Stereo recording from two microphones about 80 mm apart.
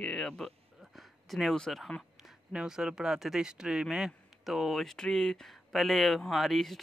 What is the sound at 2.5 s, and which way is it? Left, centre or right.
Speech, centre.